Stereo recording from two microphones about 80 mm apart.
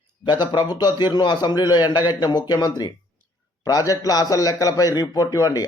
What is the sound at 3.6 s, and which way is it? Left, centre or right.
A man's voice, left.